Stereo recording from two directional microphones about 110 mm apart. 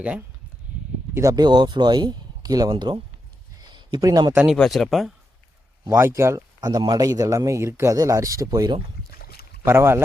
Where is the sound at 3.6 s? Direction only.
45° right (ahead or behind).